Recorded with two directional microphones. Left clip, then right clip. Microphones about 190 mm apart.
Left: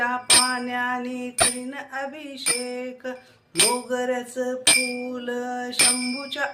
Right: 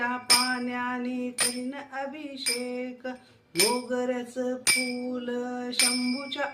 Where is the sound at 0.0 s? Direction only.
10° left (ahead or behind).